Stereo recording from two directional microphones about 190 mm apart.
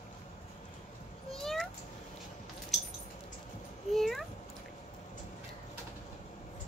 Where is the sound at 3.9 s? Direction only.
Centre (ahead or behind).